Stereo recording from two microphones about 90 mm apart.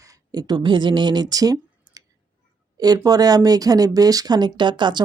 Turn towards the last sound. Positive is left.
turn(degrees=-60)  # may be behind; listen again after turning